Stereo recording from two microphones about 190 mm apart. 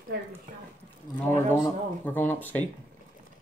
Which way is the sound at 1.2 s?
10° left (ahead or behind).